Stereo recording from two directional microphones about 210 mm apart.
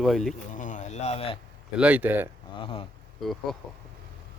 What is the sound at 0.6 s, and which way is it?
Speech, 35° left (ahead or behind).